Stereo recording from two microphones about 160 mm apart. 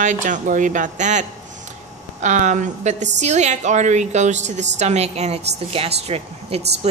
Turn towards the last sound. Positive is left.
turn(degrees=-40)  # may be behind; listen again after turning